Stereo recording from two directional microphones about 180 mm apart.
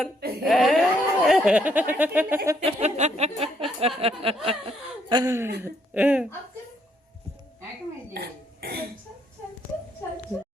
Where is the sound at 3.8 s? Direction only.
30° right (ahead or behind); by 6.2 s 10° right (ahead or behind).